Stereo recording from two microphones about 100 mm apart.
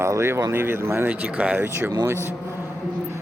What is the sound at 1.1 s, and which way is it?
Speech, 15° right (ahead or behind).